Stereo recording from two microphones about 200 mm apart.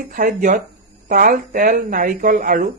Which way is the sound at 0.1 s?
40° right (ahead or behind).